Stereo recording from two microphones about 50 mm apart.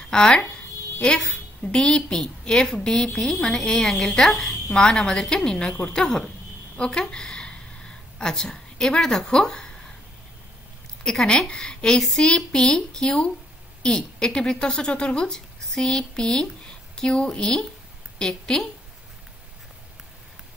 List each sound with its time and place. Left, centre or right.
0.1 s a woman's voice: centre
6.8 s a sound: centre
11.1 s a woman's voice: centre